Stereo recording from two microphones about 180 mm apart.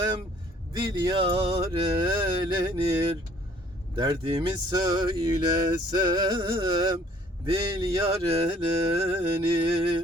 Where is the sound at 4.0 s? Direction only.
25° right (ahead or behind).